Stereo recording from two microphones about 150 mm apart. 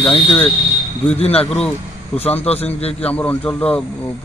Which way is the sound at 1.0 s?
40° left (ahead or behind).